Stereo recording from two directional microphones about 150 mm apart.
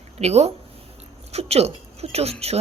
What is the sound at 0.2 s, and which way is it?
Speech, 45° right (ahead or behind).